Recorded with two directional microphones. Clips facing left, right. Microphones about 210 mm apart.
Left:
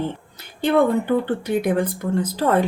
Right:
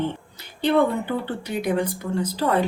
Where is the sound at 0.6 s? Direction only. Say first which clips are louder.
Left 2 dB; 50° left (ahead or behind).